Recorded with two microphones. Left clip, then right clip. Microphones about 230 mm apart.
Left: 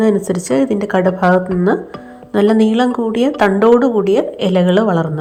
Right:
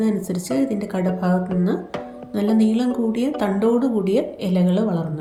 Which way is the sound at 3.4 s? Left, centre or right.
Left.